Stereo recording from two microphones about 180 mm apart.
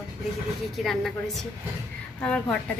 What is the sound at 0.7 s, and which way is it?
Speech, centre (ahead or behind).